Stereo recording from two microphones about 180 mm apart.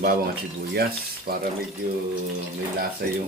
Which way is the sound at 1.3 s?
60° right (ahead or behind).